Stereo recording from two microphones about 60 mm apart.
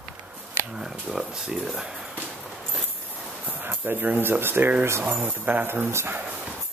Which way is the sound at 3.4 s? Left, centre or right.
Right.